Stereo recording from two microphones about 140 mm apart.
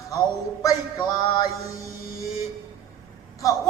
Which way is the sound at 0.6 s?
25° left (ahead or behind).